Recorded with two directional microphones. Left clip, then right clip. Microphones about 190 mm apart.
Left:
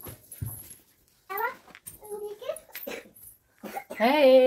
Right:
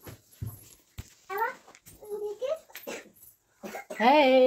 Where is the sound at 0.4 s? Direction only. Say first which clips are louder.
Left 2 dB; 50° left (ahead or behind).